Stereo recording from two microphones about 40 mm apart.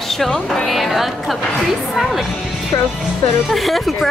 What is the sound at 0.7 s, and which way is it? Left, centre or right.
Speech, centre.